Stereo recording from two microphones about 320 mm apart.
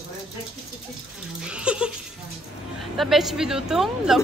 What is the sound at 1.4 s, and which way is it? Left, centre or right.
Speech, centre.